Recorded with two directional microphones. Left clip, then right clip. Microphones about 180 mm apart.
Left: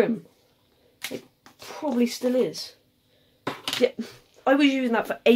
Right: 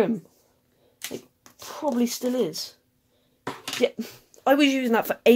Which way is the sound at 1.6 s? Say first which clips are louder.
Even; 40° right (ahead or behind).